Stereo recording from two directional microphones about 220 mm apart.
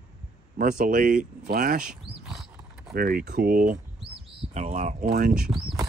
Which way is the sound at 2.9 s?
40° right (ahead or behind).